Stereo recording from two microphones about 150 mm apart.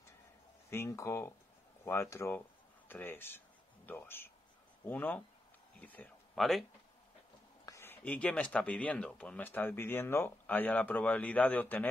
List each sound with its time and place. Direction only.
0.7 s speech: 20° left (ahead or behind)
6.3 s speech: centre (ahead or behind)
7.6 s speech: 20° left (ahead or behind)